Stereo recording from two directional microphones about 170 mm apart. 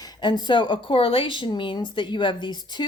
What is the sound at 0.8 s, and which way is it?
A woman's voice, 30° left (ahead or behind).